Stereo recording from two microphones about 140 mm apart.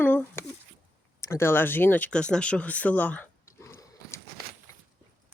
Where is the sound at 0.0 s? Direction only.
15° left (ahead or behind).